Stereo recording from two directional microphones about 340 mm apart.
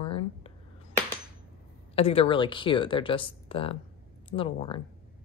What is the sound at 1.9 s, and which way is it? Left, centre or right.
Speech, centre.